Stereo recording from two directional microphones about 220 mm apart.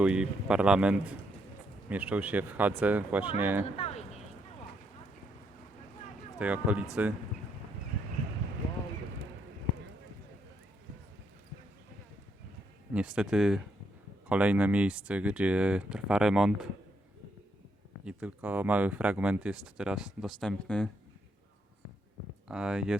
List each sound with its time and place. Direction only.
0.0 s speech: 5° right (ahead or behind)
3.8 s a sound: 30° left (ahead or behind)
6.4 s speech: 5° right (ahead or behind)
12.9 s speech: 5° right (ahead or behind)
18.0 s speech: 5° right (ahead or behind)
22.4 s speech: 5° right (ahead or behind)